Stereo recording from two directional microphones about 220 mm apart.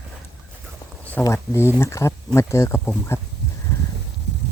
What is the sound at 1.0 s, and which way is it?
Speech, 5° left (ahead or behind).